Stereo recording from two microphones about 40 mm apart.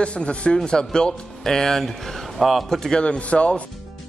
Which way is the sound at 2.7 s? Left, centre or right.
Centre.